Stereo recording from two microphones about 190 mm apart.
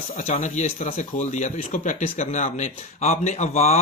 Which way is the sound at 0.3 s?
35° left (ahead or behind).